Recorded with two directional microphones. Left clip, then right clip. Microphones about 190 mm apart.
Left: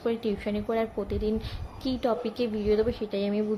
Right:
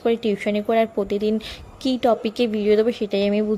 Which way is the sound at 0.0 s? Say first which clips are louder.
Right 8 dB; 40° right (ahead or behind).